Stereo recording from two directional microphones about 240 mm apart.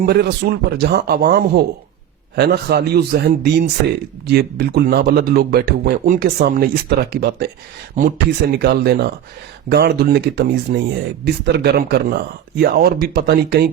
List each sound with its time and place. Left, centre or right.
0.0 s speech: right
8.5 s speech: right